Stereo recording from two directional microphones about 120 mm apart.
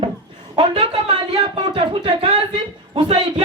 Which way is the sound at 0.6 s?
45° right (ahead or behind).